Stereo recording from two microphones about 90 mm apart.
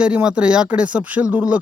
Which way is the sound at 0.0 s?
10° right (ahead or behind).